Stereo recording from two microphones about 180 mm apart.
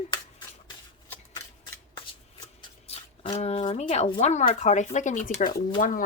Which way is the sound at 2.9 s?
35° left (ahead or behind).